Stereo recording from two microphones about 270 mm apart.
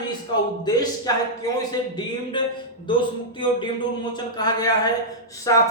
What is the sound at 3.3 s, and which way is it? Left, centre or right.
Speech, centre.